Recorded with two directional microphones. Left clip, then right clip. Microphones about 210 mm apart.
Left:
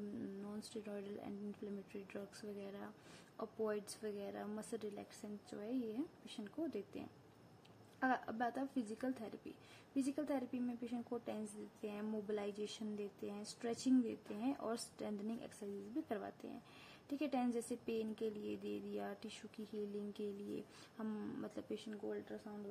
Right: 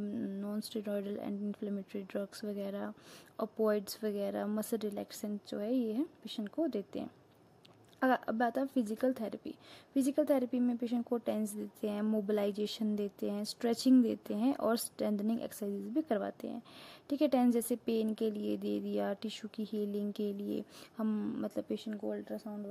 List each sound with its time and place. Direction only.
0.2 s speech: 40° right (ahead or behind)